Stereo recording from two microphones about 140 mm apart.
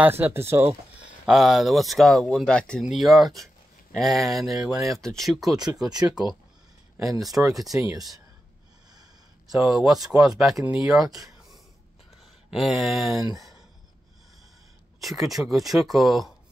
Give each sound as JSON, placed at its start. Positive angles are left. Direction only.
{"t": 0.0, "sound": "speech", "side_deg": -15}
{"t": 1.2, "sound": "speech", "side_deg": 0}
{"t": 5.8, "sound": "speech", "side_deg": -30}
{"t": 7.5, "sound": "speech", "side_deg": 0}
{"t": 9.5, "sound": "speech", "side_deg": -5}
{"t": 12.4, "sound": "speech", "side_deg": 0}
{"t": 15.0, "sound": "speech", "side_deg": 0}